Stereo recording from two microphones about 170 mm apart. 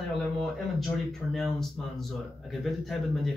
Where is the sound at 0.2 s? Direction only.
Centre (ahead or behind).